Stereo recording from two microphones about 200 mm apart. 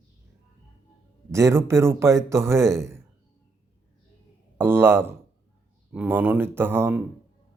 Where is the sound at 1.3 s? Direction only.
15° right (ahead or behind).